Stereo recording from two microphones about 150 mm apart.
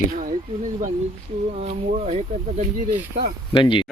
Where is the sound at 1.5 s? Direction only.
50° right (ahead or behind).